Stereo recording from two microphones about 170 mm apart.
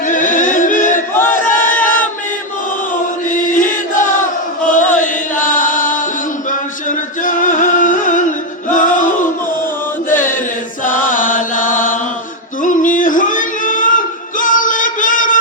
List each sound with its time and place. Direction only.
0.1 s music: 50° left (ahead or behind)
1.1 s battle cry: 10° left (ahead or behind)
3.3 s chant: 50° left (ahead or behind)
6.5 s music: 50° left (ahead or behind)
10.1 s chant: 50° left (ahead or behind)
12.6 s singing: 50° left (ahead or behind)